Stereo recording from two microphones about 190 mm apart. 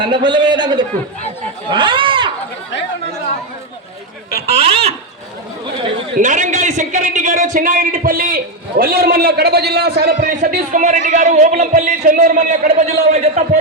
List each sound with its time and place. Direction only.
0.0 s a man's voice: 25° right (ahead or behind)
4.4 s a man's voice: 30° right (ahead or behind)
6.1 s a man's voice: 40° right (ahead or behind)